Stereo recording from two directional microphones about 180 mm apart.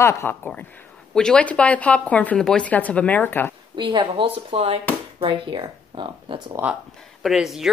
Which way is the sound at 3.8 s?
30° right (ahead or behind).